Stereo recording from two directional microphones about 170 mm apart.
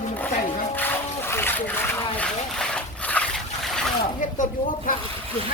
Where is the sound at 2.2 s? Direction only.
5° left (ahead or behind).